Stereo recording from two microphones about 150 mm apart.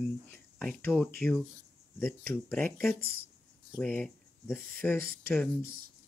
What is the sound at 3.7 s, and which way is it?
Speech, 5° left (ahead or behind).